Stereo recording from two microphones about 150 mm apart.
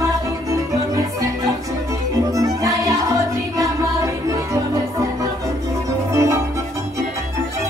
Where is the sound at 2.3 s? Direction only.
20° right (ahead or behind).